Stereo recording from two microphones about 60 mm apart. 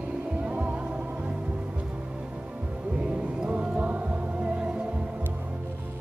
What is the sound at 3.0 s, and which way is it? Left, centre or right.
Music, centre.